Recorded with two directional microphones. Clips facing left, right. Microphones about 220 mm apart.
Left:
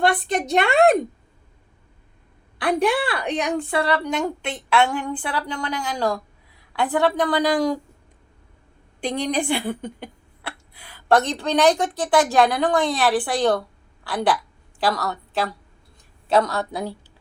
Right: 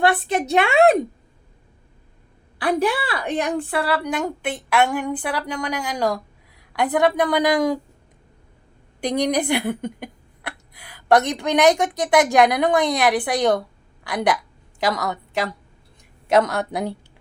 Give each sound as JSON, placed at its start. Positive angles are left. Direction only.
{"t": 0.0, "sound": "a woman's voice", "side_deg": -5}
{"t": 2.6, "sound": "a woman's voice", "side_deg": -5}
{"t": 9.0, "sound": "speech", "side_deg": -15}
{"t": 14.8, "sound": "a woman's voice", "side_deg": -15}